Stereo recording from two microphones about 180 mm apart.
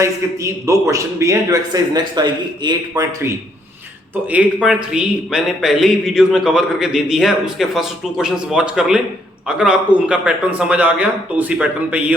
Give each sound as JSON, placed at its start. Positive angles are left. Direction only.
{"t": 0.0, "sound": "a man's voice", "side_deg": -15}
{"t": 4.1, "sound": "a man's voice", "side_deg": -10}